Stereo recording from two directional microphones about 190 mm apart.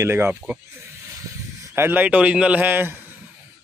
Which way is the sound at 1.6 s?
15° right (ahead or behind).